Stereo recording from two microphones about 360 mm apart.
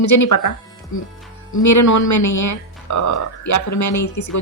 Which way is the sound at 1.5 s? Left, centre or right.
Left.